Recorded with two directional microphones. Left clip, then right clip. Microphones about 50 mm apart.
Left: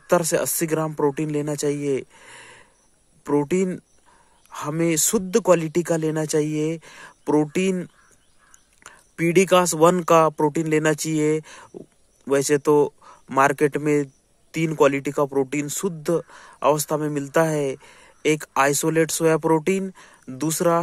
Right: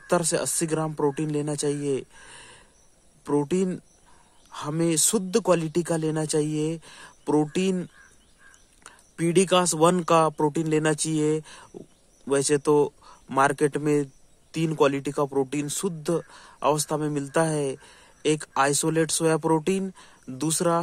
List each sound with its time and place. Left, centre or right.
0.0 s speech: left
8.8 s speech: left
13.8 s a sound: left
14.8 s speech: left